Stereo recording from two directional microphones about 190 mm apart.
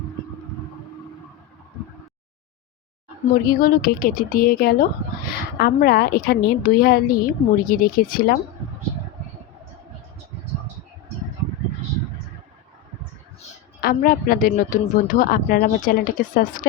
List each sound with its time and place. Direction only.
3.4 s speech: 50° left (ahead or behind)
13.8 s speech: 50° left (ahead or behind)